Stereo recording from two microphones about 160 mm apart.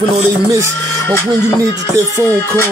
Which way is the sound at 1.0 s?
15° left (ahead or behind).